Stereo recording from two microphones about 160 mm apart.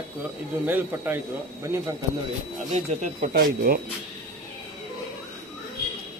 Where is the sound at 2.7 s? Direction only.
50° right (ahead or behind); by 3.8 s 65° right (ahead or behind).